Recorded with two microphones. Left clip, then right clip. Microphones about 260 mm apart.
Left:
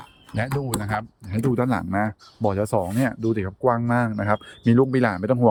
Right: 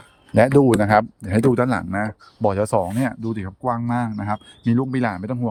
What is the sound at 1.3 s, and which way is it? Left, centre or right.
Speech, centre.